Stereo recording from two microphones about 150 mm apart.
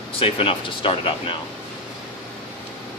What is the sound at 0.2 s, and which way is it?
Speech, 40° left (ahead or behind).